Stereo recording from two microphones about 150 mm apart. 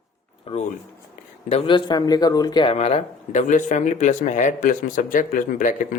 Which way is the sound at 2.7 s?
45° left (ahead or behind).